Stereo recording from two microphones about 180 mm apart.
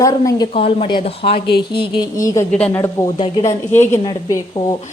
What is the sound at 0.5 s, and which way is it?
A woman's voice, 30° left (ahead or behind).